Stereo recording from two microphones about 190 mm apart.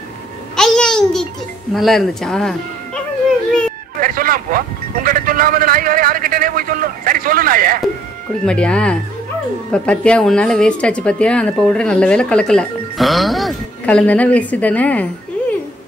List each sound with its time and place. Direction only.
0.6 s a sound: 5° left (ahead or behind)
1.7 s a woman's voice: centre (ahead or behind)
4.0 s a man's voice: 50° right (ahead or behind)
8.5 s a woman's voice: 5° left (ahead or behind)